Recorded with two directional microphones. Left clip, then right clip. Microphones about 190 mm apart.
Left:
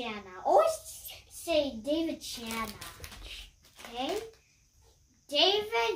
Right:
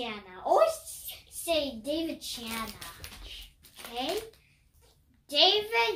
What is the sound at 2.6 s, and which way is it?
Speech, 25° left (ahead or behind).